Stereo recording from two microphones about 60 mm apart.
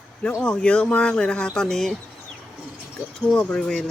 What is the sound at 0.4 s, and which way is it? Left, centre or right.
Speech, centre.